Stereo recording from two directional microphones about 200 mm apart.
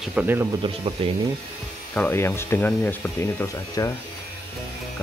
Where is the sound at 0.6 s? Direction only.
30° right (ahead or behind).